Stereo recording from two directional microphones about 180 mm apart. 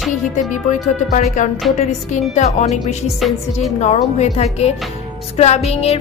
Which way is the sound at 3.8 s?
40° left (ahead or behind).